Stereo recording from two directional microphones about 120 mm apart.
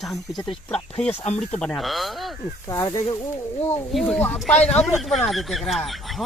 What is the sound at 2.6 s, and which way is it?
Speech, 25° left (ahead or behind).